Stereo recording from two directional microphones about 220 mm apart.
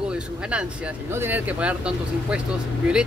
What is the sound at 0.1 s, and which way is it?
Speech, 5° right (ahead or behind).